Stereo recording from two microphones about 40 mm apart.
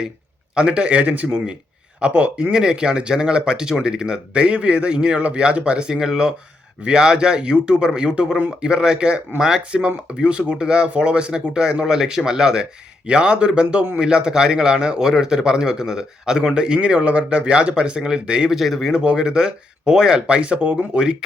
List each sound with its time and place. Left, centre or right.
0.5 s speech: right
2.5 s a man's voice: centre
18.5 s a man's voice: centre
18.9 s speech: right